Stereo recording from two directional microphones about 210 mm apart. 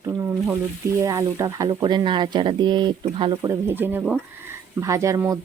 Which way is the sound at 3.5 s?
10° right (ahead or behind).